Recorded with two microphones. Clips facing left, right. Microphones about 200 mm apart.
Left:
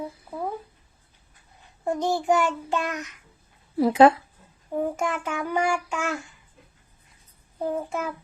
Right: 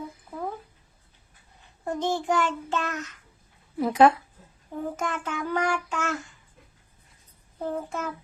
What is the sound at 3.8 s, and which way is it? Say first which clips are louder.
Speech: left 3 dB; 30° left (ahead or behind).